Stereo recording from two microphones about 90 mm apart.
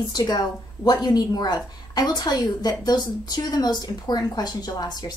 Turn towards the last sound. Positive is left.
turn(degrees=45)  # may be behind; listen again after turning